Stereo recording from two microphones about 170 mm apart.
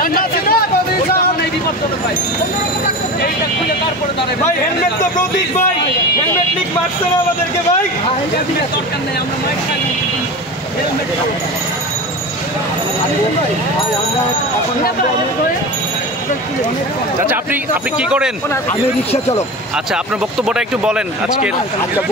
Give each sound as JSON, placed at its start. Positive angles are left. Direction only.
{"t": 0.0, "sound": "a sound", "side_deg": 60}
{"t": 17.3, "sound": "a man's voice", "side_deg": -10}
{"t": 19.9, "sound": "speech", "side_deg": -5}